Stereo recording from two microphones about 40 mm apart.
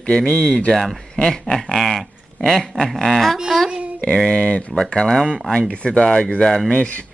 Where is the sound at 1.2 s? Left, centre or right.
Centre.